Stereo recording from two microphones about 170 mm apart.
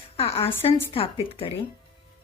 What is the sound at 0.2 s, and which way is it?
Speech, 35° left (ahead or behind).